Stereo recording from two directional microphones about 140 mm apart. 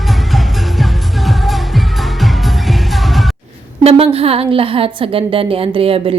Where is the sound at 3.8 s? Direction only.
45° right (ahead or behind).